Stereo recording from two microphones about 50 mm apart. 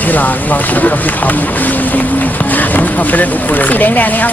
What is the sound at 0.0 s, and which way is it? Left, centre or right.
Speech, left.